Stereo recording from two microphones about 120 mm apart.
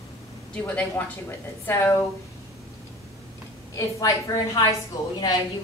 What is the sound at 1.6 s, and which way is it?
Speech, 20° left (ahead or behind).